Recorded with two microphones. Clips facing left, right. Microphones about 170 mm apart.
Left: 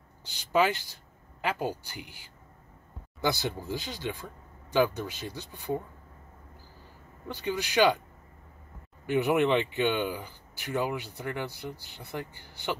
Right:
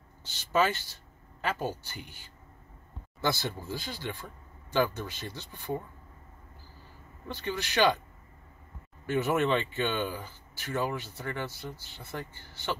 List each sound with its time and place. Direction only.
0.2 s speech: 15° left (ahead or behind)
7.3 s speech: 15° left (ahead or behind)
9.0 s speech: 15° left (ahead or behind)